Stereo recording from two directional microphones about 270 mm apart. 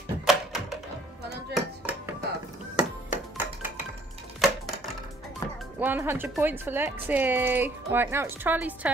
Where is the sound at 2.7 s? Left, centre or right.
Centre.